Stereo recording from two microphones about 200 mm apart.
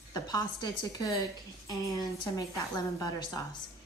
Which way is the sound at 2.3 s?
15° left (ahead or behind).